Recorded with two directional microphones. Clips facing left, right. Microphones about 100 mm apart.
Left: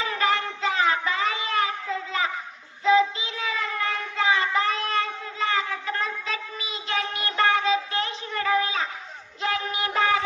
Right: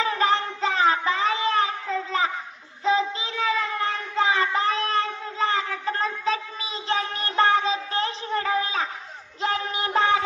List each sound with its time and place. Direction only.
0.0 s child singing: 35° right (ahead or behind)